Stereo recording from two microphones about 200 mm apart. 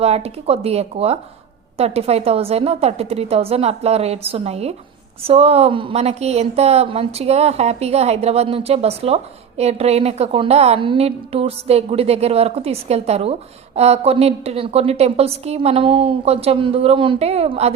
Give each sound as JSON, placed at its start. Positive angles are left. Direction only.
{"t": 0.0, "sound": "a woman's voice", "side_deg": -30}